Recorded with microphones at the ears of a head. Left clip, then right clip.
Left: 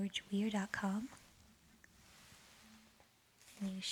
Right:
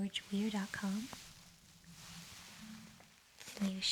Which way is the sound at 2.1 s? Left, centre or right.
Right.